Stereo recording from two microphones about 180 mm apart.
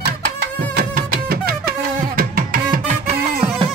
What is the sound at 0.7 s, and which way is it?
Music, 55° right (ahead or behind).